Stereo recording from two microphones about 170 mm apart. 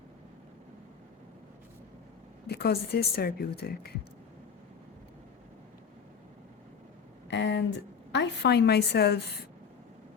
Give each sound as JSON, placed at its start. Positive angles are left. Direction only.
{"t": 2.5, "sound": "speech", "side_deg": 70}
{"t": 7.3, "sound": "a sound", "side_deg": 90}
{"t": 8.1, "sound": "speech", "side_deg": 85}